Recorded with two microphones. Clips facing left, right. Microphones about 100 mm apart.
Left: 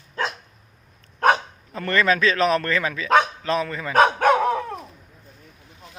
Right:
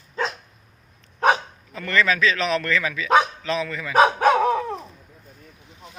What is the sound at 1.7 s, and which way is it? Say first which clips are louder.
A man's voice: left 1 dB; 40° left (ahead or behind).